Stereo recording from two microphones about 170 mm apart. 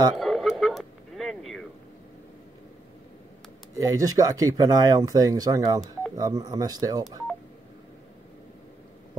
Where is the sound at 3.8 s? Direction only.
20° right (ahead or behind).